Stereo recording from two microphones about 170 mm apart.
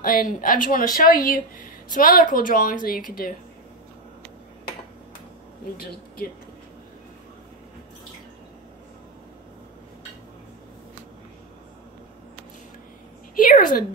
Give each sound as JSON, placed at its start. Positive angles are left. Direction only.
{"t": 0.0, "sound": "speech", "side_deg": 55}
{"t": 5.8, "sound": "speech", "side_deg": 60}
{"t": 13.4, "sound": "a sound", "side_deg": 55}